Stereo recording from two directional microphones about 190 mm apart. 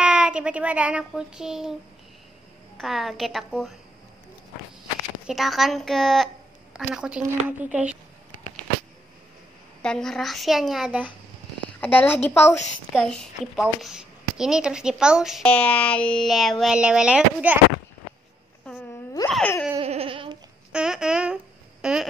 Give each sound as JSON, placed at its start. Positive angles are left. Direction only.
{"t": 0.0, "sound": "a woman's voice", "side_deg": -5}
{"t": 2.8, "sound": "a woman's voice", "side_deg": 0}
{"t": 5.2, "sound": "a woman's voice", "side_deg": 0}
{"t": 9.8, "sound": "a woman's voice", "side_deg": 5}
{"t": 11.8, "sound": "a woman's voice", "side_deg": 10}
{"t": 19.2, "sound": "a woman's voice", "side_deg": 5}
{"t": 19.8, "sound": "a sound", "side_deg": -30}
{"t": 20.7, "sound": "babbling", "side_deg": -5}
{"t": 21.8, "sound": "a sound", "side_deg": -5}